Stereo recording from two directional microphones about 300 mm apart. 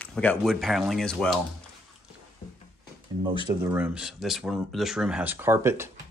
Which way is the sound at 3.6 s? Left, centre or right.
Centre.